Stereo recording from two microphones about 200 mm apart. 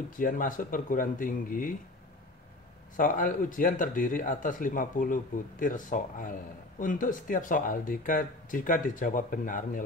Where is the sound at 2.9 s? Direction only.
40° left (ahead or behind).